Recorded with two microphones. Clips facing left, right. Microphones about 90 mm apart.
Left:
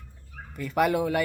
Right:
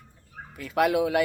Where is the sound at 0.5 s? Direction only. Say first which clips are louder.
Right 1 dB; centre (ahead or behind).